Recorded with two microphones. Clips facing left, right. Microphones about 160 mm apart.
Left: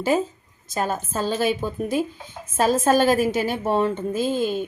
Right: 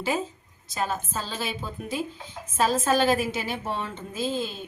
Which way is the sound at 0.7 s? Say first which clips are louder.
Left 4 dB; 45° left (ahead or behind).